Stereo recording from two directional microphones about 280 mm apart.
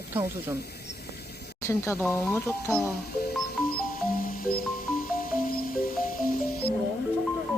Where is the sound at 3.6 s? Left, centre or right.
Left.